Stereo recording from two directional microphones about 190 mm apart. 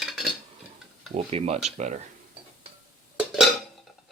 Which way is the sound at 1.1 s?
30° right (ahead or behind).